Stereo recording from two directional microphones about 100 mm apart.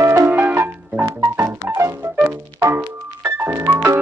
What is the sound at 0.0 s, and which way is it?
Music, 30° right (ahead or behind).